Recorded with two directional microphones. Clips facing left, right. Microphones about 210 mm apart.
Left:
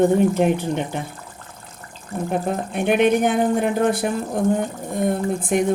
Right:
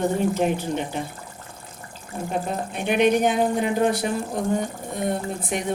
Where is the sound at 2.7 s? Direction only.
55° left (ahead or behind).